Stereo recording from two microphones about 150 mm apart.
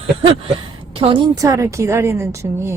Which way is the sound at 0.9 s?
35° right (ahead or behind).